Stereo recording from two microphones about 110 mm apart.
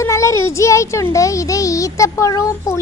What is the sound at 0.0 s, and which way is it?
A woman's voice, 30° left (ahead or behind).